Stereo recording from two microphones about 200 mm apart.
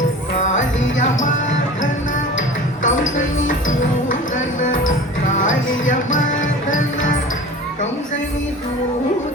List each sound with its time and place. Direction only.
0.3 s music: 35° left (ahead or behind)
2.8 s music: 40° left (ahead or behind)